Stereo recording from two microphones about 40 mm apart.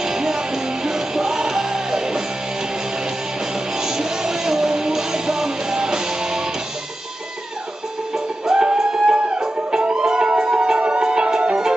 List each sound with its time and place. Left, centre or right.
0.0 s music: centre
3.7 s music: centre
8.1 s music: centre